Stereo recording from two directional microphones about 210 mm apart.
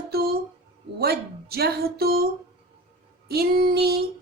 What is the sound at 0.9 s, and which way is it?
Speech, 50° right (ahead or behind).